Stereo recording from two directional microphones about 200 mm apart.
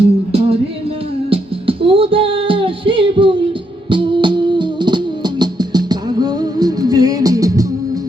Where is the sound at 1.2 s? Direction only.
25° right (ahead or behind).